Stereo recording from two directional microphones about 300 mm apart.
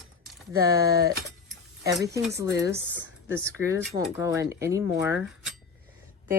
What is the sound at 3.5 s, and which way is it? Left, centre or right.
Speech, centre.